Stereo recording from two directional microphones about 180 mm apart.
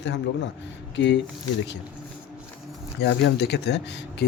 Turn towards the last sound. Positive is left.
turn(degrees=70)  # may be behind; listen again after turning